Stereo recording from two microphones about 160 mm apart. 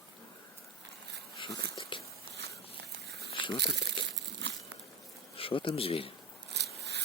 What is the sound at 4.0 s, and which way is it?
Crumpling, 30° left (ahead or behind).